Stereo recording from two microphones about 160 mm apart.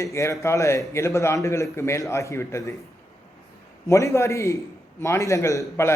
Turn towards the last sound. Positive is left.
turn(degrees=15)  # may be behind; listen again after turning